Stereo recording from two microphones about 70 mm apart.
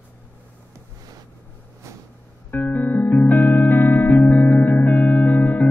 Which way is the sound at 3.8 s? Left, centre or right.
Centre.